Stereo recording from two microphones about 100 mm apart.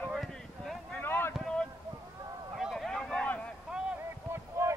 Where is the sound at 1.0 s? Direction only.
25° left (ahead or behind).